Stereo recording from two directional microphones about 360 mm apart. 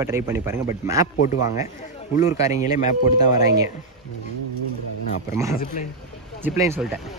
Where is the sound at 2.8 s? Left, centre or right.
Left.